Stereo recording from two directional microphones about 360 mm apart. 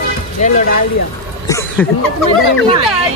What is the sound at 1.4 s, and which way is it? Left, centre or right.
Speech, centre.